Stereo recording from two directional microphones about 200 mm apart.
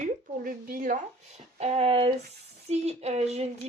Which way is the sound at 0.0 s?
45° right (ahead or behind).